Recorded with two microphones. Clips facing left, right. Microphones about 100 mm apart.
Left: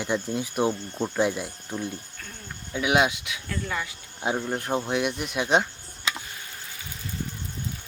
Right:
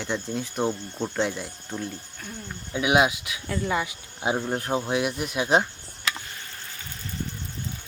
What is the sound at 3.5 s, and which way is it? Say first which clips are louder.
Speech: right 5 dB; 20° right (ahead or behind).